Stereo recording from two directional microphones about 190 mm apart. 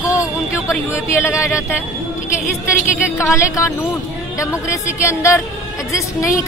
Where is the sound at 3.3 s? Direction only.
15° left (ahead or behind).